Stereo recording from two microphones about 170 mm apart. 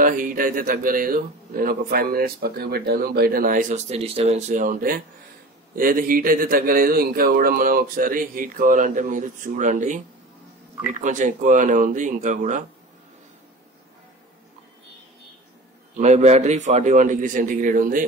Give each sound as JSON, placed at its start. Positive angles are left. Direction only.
{"t": 0.0, "sound": "a man's voice", "side_deg": -55}
{"t": 16.0, "sound": "a man's voice", "side_deg": -40}